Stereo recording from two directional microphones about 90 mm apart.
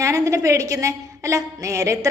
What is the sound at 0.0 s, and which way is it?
A woman's voice, 35° right (ahead or behind).